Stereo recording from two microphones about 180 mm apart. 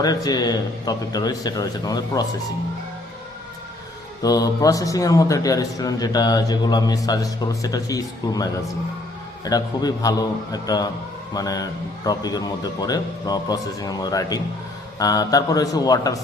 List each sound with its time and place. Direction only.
0.0 s a man's voice: 20° left (ahead or behind)
4.2 s a man's voice: 20° left (ahead or behind)